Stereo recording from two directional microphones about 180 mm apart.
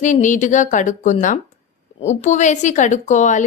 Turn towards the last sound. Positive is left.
turn(degrees=40)  # may be behind; listen again after turning